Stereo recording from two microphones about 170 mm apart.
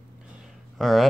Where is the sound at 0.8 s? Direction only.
Centre (ahead or behind).